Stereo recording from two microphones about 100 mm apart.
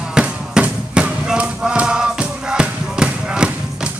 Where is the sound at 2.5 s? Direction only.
10° right (ahead or behind).